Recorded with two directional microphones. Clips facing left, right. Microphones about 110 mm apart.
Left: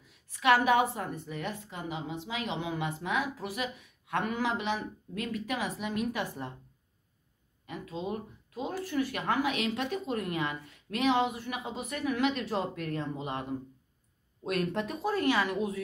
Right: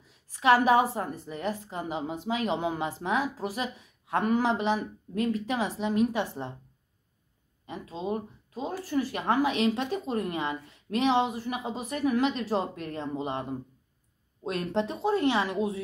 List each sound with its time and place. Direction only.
0.0 s a woman's voice: 35° right (ahead or behind)
7.6 s a woman's voice: 30° right (ahead or behind)